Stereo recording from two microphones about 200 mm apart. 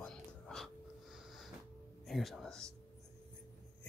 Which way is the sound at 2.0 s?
Centre (ahead or behind).